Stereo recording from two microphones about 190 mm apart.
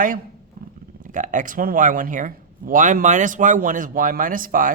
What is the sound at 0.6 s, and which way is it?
Dog, 50° right (ahead or behind).